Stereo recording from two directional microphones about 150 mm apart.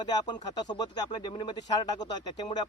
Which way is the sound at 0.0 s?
25° left (ahead or behind).